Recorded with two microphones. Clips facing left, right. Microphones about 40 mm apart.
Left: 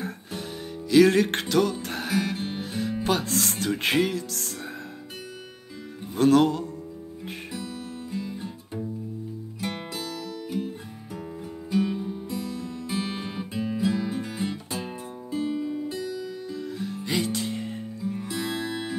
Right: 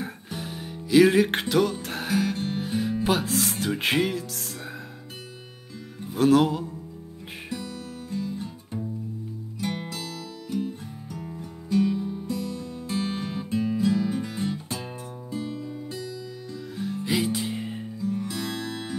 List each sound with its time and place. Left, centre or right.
0.0 s music: centre
2.6 s music: centre
6.1 s music: centre
9.6 s music: centre
11.7 s music: centre
18.0 s music: centre